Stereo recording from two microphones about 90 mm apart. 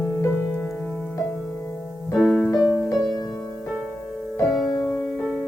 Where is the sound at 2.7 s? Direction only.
45° left (ahead or behind).